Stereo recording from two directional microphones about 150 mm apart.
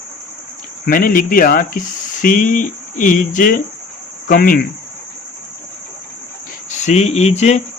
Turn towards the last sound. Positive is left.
turn(degrees=50)  # may be behind; listen again after turning